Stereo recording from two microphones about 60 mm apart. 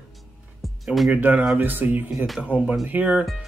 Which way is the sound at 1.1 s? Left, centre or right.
Right.